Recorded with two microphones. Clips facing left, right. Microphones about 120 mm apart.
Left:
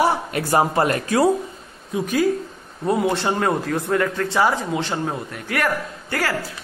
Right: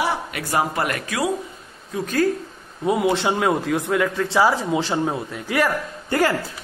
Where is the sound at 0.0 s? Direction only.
35° left (ahead or behind).